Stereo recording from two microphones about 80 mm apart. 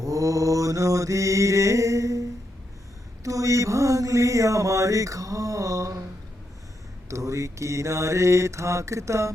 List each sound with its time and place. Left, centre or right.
0.0 s mantra: right
3.2 s mantra: right
7.1 s mantra: right